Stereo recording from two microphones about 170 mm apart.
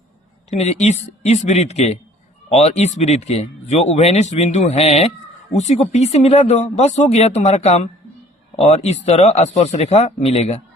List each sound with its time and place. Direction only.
0.5 s speech: 40° left (ahead or behind)